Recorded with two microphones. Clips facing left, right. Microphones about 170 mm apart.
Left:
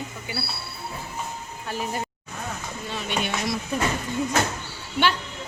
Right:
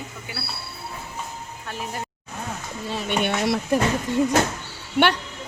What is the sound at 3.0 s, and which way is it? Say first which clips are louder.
Speech: right 5 dB; 60° right (ahead or behind).